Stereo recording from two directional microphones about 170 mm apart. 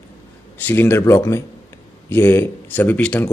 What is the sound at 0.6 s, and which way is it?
Speech, 10° left (ahead or behind).